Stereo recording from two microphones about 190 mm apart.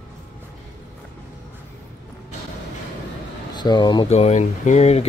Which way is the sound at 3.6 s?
20° left (ahead or behind).